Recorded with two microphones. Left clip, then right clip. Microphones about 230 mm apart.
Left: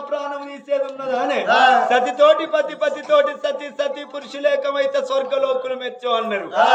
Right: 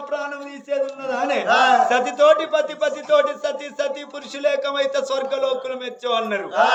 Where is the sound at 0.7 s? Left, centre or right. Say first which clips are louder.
Left 2 dB; centre.